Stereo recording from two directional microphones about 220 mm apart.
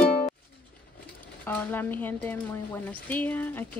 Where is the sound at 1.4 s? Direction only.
10° left (ahead or behind).